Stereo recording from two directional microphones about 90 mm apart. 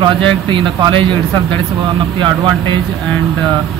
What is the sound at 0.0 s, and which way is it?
Speech, 65° right (ahead or behind).